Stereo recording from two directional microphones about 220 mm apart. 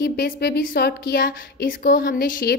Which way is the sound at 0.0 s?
45° left (ahead or behind).